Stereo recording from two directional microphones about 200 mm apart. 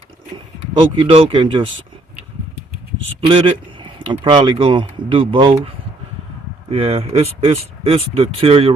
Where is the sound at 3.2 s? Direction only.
25° right (ahead or behind).